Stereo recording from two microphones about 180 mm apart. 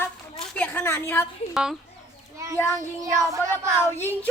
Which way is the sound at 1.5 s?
Centre (ahead or behind).